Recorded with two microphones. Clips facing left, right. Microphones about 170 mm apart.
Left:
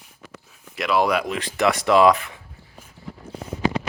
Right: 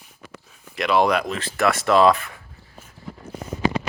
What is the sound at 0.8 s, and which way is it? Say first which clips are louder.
Speech: right 1 dB; 5° left (ahead or behind).